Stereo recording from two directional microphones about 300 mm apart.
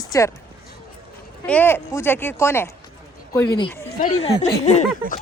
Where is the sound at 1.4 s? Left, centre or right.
Centre.